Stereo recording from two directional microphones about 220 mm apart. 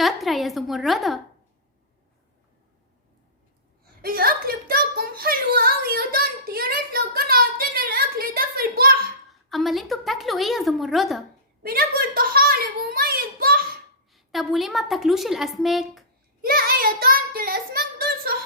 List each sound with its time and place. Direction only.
0.0 s a woman's voice: centre (ahead or behind)
4.0 s a sound: 40° right (ahead or behind)
9.3 s a woman's voice: centre (ahead or behind)
11.6 s a child's voice: 45° right (ahead or behind)
14.1 s a woman's voice: centre (ahead or behind)
16.4 s child singing: 40° right (ahead or behind)